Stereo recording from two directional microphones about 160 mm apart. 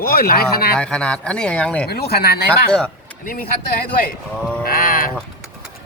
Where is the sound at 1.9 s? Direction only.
75° left (ahead or behind).